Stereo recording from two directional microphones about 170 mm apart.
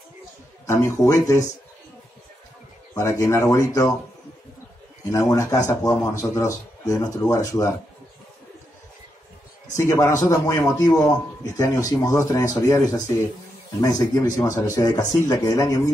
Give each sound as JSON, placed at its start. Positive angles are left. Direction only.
{"t": 0.7, "sound": "speech", "side_deg": 15}
{"t": 2.9, "sound": "speech", "side_deg": 20}
{"t": 5.1, "sound": "speech", "side_deg": 20}
{"t": 9.8, "sound": "speech", "side_deg": 15}